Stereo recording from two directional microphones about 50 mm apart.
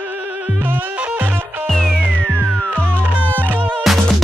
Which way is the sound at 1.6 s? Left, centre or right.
Centre.